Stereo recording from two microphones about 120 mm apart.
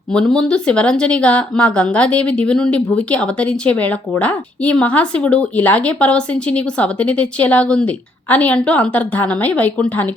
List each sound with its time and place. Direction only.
0.1 s speech: 5° left (ahead or behind)